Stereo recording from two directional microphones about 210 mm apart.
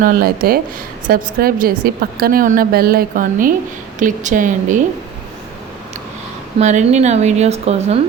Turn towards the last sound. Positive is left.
turn(degrees=-30)  # may be behind; listen again after turning